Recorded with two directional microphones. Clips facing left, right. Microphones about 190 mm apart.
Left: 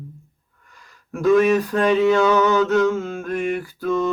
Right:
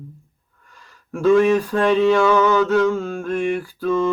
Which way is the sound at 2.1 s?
20° left (ahead or behind).